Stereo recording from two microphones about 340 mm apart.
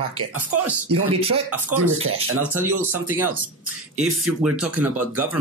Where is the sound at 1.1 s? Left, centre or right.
Centre.